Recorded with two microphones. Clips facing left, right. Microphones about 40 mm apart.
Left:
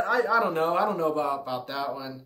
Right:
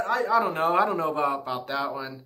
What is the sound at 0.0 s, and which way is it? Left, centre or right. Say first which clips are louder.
Speech: even; centre.